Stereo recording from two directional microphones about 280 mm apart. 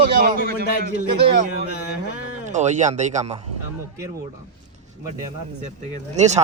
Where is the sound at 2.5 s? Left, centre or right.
Right.